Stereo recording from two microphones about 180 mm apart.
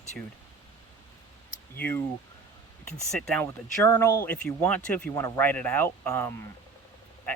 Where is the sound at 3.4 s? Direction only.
15° left (ahead or behind).